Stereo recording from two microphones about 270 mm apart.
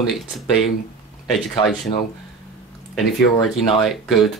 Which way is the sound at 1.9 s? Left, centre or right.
Centre.